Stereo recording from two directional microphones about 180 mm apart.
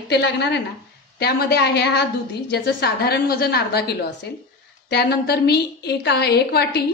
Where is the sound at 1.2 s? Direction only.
60° left (ahead or behind).